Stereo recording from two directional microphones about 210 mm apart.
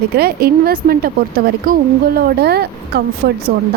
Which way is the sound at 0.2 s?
45° right (ahead or behind).